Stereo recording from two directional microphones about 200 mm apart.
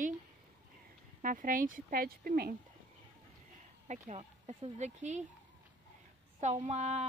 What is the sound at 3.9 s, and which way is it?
Speech, 35° right (ahead or behind).